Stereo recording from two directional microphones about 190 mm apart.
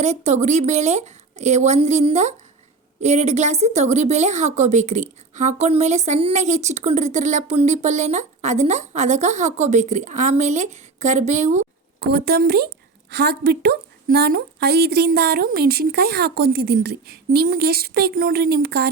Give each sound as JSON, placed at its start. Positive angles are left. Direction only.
{"t": 0.0, "sound": "a woman's voice", "side_deg": -35}
{"t": 11.9, "sound": "a woman's voice", "side_deg": -55}